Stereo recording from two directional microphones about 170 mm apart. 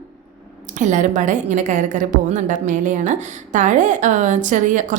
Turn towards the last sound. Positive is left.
turn(degrees=-45)  # may be behind; listen again after turning